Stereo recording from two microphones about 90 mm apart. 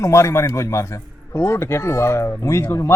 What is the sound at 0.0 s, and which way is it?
A man's voice, 35° left (ahead or behind).